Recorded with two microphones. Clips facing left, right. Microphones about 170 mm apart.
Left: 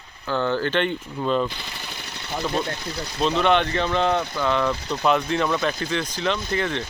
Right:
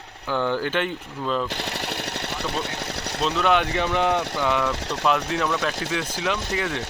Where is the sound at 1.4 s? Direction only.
75° right (ahead or behind).